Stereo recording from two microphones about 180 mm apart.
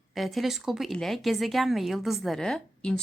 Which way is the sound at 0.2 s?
Centre (ahead or behind).